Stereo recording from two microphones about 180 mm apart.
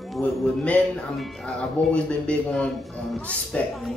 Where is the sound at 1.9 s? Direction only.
5° left (ahead or behind).